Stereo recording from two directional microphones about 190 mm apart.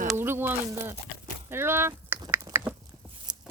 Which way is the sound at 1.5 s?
10° right (ahead or behind).